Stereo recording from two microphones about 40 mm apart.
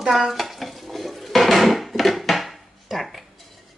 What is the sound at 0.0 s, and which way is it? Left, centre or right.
Dishes, centre.